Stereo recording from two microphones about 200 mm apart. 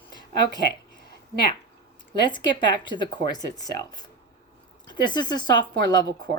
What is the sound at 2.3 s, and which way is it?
Speech, 25° left (ahead or behind).